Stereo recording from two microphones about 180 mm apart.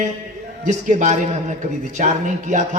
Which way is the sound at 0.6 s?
45° right (ahead or behind).